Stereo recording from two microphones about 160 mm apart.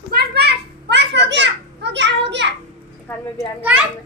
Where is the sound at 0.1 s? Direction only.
85° right.